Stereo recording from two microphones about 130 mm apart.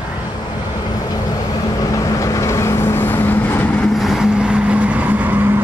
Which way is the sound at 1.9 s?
25° left (ahead or behind).